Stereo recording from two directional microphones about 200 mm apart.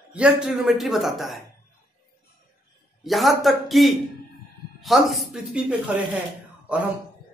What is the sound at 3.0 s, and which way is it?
Speech, centre (ahead or behind).